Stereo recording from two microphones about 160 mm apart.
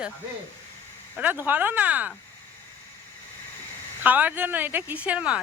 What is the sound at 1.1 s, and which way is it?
Speech, 10° right (ahead or behind).